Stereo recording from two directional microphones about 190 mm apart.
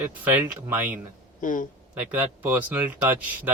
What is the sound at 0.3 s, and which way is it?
Speech, 10° right (ahead or behind).